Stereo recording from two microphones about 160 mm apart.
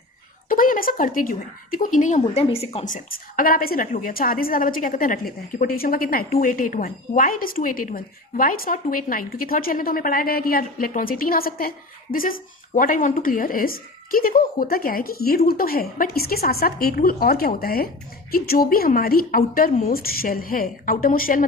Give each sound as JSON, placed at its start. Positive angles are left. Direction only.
{"t": 0.4, "sound": "a woman's voice", "side_deg": 60}
{"t": 2.2, "sound": "a woman's voice", "side_deg": 40}
{"t": 2.9, "sound": "a woman's voice", "side_deg": 65}